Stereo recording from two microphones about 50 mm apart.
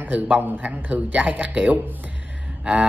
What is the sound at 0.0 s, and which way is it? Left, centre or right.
Speech, right.